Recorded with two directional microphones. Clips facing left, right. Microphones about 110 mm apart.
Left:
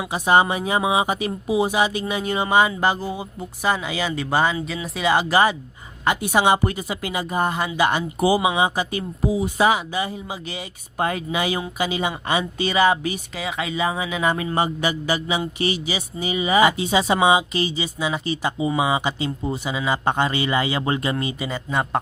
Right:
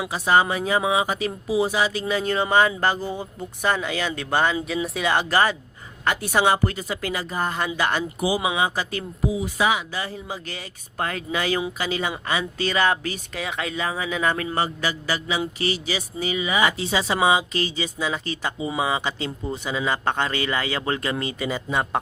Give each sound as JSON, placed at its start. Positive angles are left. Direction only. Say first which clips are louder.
{"t": 0.1, "sound": "speech", "louder": "left 3 dB", "side_deg": 20}
{"t": 9.3, "sound": "speech", "louder": "left 4 dB", "side_deg": 40}
{"t": 9.9, "sound": "speech", "louder": "left 4 dB", "side_deg": 15}
{"t": 12.2, "sound": "speech", "louder": "left 3 dB", "side_deg": 25}
{"t": 12.5, "sound": "speech", "louder": "left 3 dB", "side_deg": 10}
{"t": 13.3, "sound": "speech", "louder": "left 2 dB", "side_deg": 5}
{"t": 21.4, "sound": "speech", "louder": "right 2 dB", "side_deg": 0}